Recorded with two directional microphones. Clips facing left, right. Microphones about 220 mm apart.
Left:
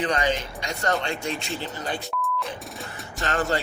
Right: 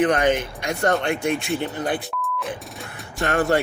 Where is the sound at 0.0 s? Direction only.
55° right (ahead or behind).